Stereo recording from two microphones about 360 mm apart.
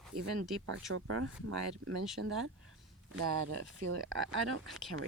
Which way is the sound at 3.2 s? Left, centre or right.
Right.